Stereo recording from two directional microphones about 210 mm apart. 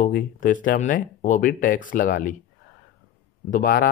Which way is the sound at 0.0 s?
40° left (ahead or behind).